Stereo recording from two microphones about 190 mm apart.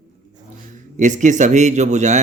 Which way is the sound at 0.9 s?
40° right (ahead or behind).